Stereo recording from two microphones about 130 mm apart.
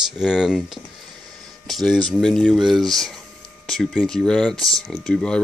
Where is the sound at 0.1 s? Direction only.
5° right (ahead or behind).